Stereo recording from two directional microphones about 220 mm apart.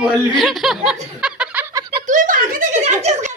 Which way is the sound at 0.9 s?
5° right (ahead or behind).